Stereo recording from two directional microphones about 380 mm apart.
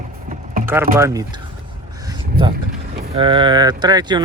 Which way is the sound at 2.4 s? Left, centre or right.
Right.